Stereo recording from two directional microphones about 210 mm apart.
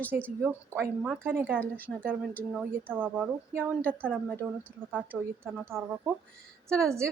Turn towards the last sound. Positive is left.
turn(degrees=-15)  # may be behind; listen again after turning